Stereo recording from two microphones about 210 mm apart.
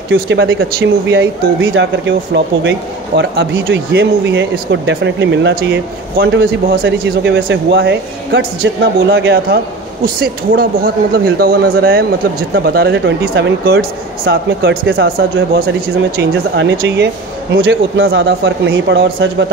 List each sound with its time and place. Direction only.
0.1 s speech: 65° right (ahead or behind)
6.8 s speech: 60° right (ahead or behind)
10.0 s speech: 45° right (ahead or behind)
16.2 s speech: 55° right (ahead or behind)